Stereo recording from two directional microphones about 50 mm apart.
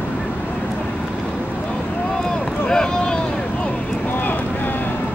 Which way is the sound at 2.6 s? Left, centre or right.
Centre.